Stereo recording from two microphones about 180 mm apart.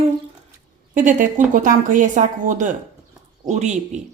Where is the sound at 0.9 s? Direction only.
45° right (ahead or behind).